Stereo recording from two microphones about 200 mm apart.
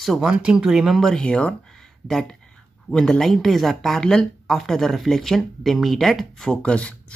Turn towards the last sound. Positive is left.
turn(degrees=5)  # may be behind; listen again after turning